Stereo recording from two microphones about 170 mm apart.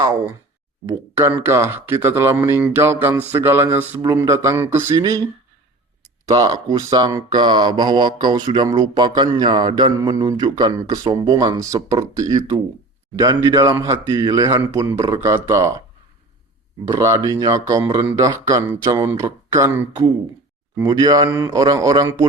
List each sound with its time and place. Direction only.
0.0 s speech: 20° right (ahead or behind)
6.2 s speech: 20° right (ahead or behind)
16.9 s speech: 20° right (ahead or behind)